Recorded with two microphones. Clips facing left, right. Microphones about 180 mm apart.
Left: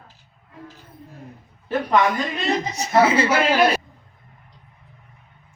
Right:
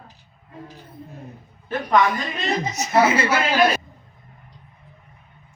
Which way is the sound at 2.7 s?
30° left (ahead or behind).